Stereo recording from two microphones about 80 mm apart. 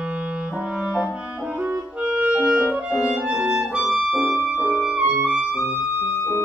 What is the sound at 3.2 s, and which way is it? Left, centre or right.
Clarinet, centre.